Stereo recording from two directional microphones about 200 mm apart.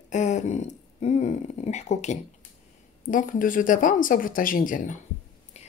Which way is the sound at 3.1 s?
40° left (ahead or behind).